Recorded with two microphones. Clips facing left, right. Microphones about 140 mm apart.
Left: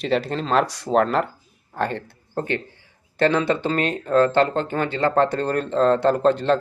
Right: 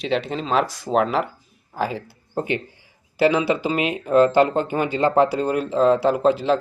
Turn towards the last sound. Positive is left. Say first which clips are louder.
# even
turn(degrees=-5)  # may be behind; listen again after turning